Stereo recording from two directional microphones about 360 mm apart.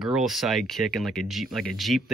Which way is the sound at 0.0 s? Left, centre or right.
Centre.